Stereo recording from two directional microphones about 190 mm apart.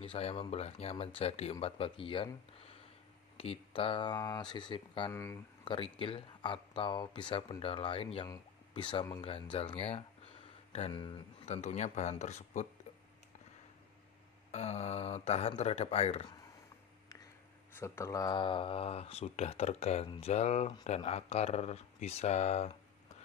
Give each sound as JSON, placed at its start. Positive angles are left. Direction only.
{"t": 0.0, "sound": "speech", "side_deg": 30}
{"t": 3.3, "sound": "speech", "side_deg": 30}
{"t": 5.1, "sound": "speech", "side_deg": 15}
{"t": 5.7, "sound": "speech", "side_deg": 25}
{"t": 14.5, "sound": "speech", "side_deg": 35}
{"t": 17.7, "sound": "speech", "side_deg": 15}